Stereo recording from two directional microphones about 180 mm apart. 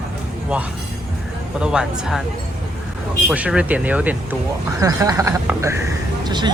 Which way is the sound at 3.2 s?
5° right (ahead or behind).